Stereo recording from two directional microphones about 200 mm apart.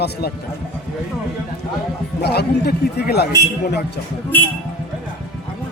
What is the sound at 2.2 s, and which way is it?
Speech, 55° left (ahead or behind).